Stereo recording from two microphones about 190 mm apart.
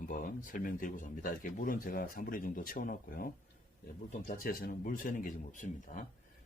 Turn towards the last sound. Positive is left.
turn(degrees=40)  # may be behind; listen again after turning